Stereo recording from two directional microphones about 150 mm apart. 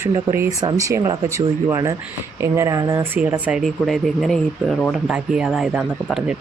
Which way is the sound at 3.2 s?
10° right (ahead or behind).